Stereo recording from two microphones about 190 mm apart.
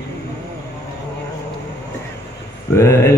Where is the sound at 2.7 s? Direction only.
15° left (ahead or behind).